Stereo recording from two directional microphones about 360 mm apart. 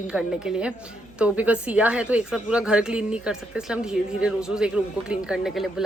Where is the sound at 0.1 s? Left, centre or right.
Centre.